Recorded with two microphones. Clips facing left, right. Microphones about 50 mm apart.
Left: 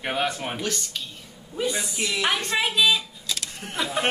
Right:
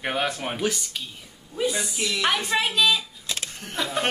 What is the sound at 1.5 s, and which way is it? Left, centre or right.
A woman's voice, centre.